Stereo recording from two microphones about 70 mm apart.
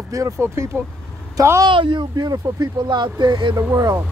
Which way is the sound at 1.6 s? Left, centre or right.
Right.